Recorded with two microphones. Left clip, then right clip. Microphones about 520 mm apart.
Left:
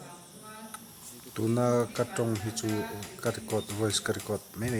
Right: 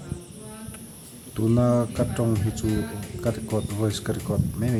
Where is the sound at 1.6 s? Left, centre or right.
Left.